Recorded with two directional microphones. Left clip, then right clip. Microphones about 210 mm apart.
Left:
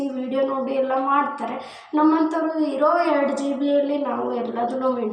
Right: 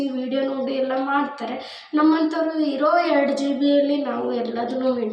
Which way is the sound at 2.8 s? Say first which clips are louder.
Even; centre (ahead or behind).